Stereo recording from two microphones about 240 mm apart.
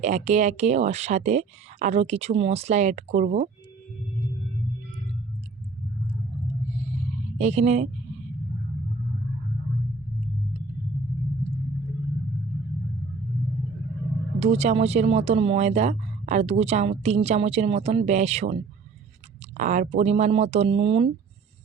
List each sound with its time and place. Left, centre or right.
0.0 s speech: right
7.3 s speech: right
14.3 s speech: right